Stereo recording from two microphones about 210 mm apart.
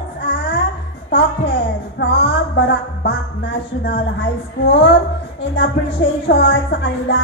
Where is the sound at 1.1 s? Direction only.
60° left (ahead or behind).